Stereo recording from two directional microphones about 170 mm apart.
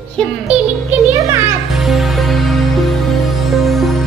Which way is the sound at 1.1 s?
15° right (ahead or behind).